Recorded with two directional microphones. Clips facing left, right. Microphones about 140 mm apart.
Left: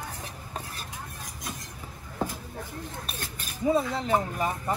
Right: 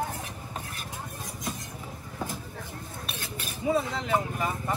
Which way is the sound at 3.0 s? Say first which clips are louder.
Right 1 dB; 45° left (ahead or behind).